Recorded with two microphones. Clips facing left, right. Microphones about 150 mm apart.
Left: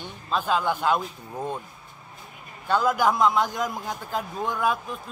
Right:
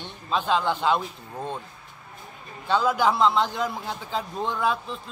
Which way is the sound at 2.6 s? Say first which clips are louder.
Even; 10° left (ahead or behind).